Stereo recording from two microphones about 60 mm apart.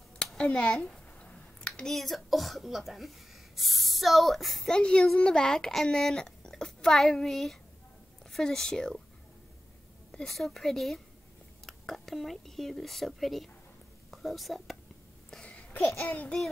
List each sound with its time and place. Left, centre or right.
0.3 s a sound: centre
1.8 s speech: centre
4.7 s a child's voice: centre
10.1 s speech: centre
15.4 s babbling: centre